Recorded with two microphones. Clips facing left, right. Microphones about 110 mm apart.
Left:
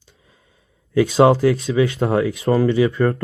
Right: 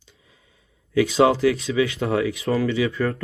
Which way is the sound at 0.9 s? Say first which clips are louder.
Left 4 dB; 40° left (ahead or behind).